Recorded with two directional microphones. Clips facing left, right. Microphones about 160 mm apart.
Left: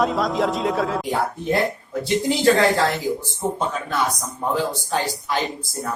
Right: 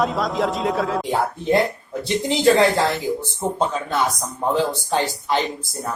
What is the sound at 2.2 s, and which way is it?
Speech, 20° right (ahead or behind).